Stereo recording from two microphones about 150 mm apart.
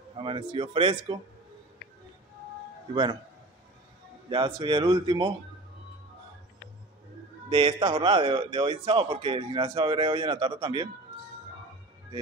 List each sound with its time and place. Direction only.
0.2 s a man's voice: 35° right (ahead or behind)
2.9 s a man's voice: 30° right (ahead or behind)
4.3 s a man's voice: 30° right (ahead or behind)
7.4 s a man's voice: 35° right (ahead or behind)